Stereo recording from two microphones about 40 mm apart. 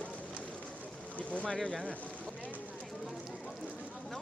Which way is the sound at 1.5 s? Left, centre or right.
Centre.